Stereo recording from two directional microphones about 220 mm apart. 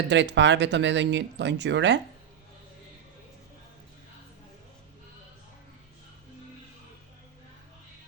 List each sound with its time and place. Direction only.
0.1 s speech: 55° right (ahead or behind)